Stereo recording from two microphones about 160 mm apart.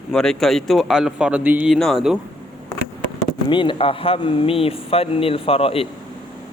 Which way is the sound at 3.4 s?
30° left (ahead or behind).